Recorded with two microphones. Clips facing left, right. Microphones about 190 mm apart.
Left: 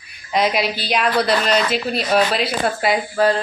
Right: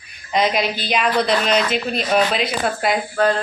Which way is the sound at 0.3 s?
5° left (ahead or behind).